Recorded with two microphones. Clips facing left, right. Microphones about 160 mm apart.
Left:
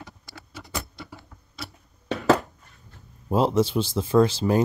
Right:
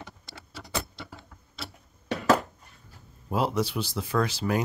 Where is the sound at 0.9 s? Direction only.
25° right (ahead or behind).